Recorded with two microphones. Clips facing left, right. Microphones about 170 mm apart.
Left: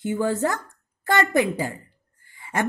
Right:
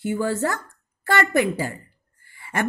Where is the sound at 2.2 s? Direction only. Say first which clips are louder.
Left 1 dB; 20° left (ahead or behind).